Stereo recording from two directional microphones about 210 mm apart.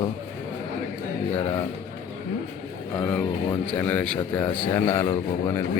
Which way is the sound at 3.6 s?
5° left (ahead or behind).